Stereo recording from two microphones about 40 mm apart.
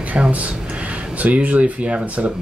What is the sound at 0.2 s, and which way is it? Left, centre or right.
Speech, right.